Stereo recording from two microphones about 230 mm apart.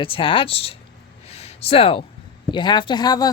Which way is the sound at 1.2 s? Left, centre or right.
Left.